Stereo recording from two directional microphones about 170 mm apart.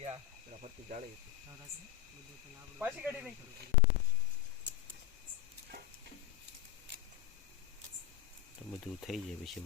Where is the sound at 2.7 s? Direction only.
10° right (ahead or behind).